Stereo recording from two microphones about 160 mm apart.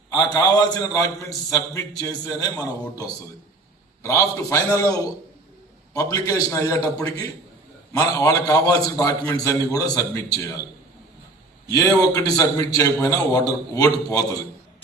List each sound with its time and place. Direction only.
0.3 s a man's voice: 25° left (ahead or behind)
11.7 s a man's voice: 20° left (ahead or behind)